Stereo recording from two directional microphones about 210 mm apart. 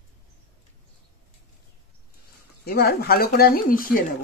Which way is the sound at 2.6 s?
50° left (ahead or behind).